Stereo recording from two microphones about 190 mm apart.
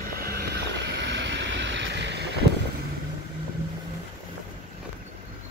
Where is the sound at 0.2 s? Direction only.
55° right (ahead or behind).